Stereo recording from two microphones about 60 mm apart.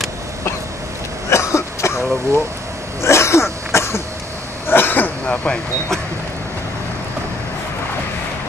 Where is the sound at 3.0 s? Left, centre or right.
Left.